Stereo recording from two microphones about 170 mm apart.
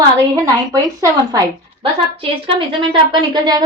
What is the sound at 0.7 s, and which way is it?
Speech, 20° right (ahead or behind).